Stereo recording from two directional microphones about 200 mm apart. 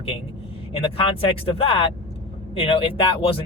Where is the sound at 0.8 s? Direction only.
25° left (ahead or behind).